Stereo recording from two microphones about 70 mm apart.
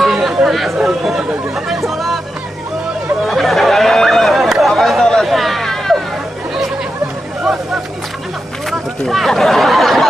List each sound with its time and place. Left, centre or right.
0.0 s a sound: centre
1.9 s music: centre
3.3 s chatter: centre
8.6 s chatter: centre